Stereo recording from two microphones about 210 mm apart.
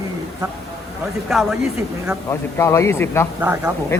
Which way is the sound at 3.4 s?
10° right (ahead or behind).